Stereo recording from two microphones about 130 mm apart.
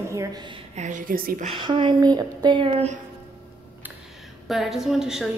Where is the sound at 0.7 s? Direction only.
75° right (ahead or behind).